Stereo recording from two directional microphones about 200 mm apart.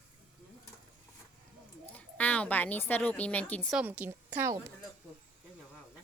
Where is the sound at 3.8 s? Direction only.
5° right (ahead or behind).